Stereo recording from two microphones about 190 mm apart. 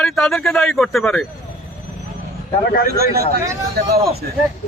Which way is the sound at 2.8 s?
55° right (ahead or behind).